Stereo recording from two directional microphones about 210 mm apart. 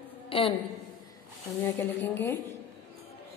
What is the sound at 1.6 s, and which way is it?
Speech, 10° left (ahead or behind).